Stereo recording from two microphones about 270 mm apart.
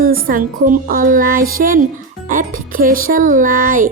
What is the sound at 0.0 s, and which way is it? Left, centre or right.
A woman's voice, right.